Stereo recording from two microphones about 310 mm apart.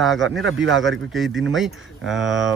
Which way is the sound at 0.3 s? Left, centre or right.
Right.